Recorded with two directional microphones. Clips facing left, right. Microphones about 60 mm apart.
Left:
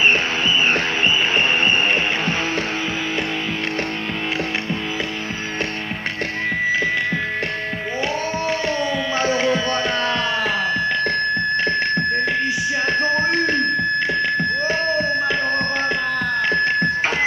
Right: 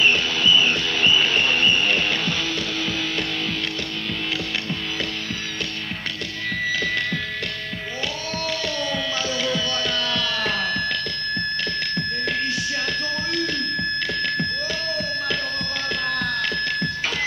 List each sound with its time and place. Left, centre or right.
0.0 s music: left
8.5 s tabla: left
10.4 s music: centre
11.1 s music: left